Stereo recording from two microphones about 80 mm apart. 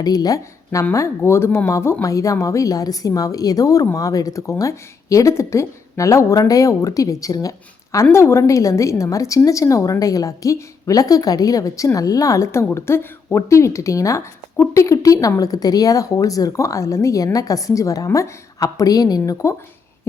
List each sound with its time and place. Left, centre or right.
0.0 s speech: left
8.1 s a woman's voice: left